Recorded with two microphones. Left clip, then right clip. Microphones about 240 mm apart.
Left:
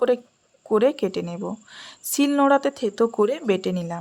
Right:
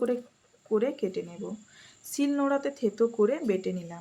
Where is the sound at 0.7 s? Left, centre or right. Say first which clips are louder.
Left 8 dB; left.